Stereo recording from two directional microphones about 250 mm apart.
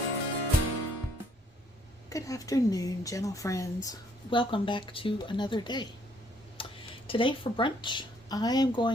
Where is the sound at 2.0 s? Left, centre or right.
Centre.